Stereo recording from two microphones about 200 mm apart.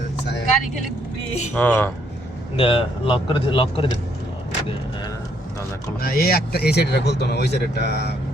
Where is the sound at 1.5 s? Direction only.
10° left (ahead or behind).